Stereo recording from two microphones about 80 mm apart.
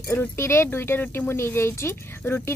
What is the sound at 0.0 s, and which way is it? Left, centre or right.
Speech, left.